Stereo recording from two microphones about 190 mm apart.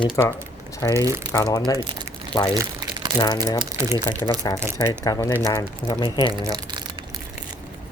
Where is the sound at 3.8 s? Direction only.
15° right (ahead or behind).